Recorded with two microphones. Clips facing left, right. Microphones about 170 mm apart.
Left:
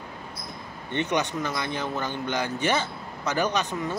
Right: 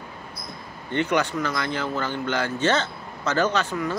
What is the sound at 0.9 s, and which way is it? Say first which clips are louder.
Speech: right 3 dB; 20° left (ahead or behind).